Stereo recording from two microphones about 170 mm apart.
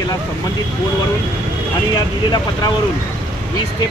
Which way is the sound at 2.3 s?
25° left (ahead or behind).